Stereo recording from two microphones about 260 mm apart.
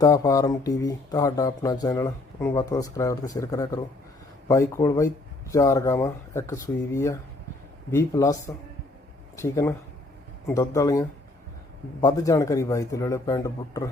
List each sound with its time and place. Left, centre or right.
0.0 s speech: centre